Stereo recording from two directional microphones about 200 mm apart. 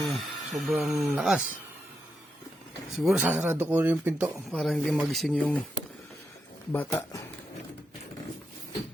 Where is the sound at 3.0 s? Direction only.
Centre (ahead or behind).